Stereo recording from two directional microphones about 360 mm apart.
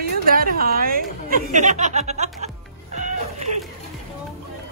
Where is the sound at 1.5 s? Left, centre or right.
Centre.